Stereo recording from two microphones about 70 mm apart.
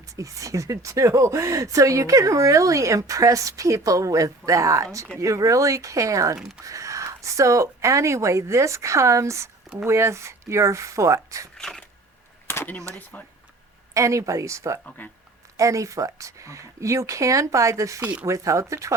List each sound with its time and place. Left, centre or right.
0.2 s speech: right
11.5 s shuffling cards: centre
12.5 s a sound: left
13.1 s speech: left
13.9 s speech: right
18.0 s speech: centre
18.3 s speech: right